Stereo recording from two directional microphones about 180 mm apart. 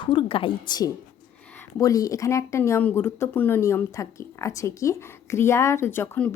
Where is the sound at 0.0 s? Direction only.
30° left (ahead or behind).